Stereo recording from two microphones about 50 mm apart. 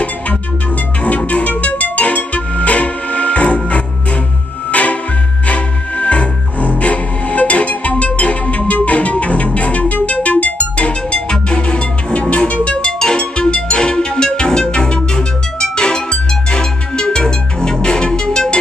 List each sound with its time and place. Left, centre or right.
1.0 s music: left